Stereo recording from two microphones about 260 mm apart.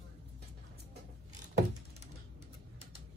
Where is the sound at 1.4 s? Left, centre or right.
Right.